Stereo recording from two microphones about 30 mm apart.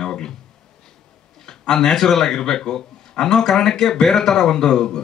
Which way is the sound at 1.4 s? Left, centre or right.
Left.